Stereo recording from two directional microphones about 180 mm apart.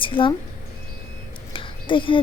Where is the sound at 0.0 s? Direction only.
30° left (ahead or behind).